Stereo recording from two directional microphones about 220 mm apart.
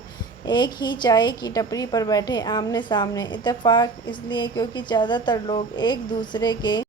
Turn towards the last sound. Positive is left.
turn(degrees=20)  # may be behind; listen again after turning